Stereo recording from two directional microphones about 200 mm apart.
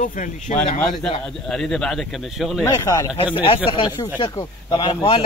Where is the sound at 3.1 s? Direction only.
25° left (ahead or behind).